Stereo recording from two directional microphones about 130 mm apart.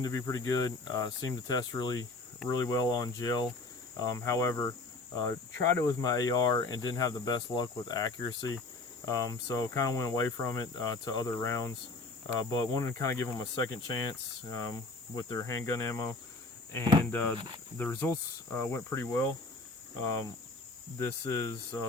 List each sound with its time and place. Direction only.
0.0 s speech: 25° left (ahead or behind)
17.1 s speech: 15° left (ahead or behind)
21.0 s speech: 25° left (ahead or behind)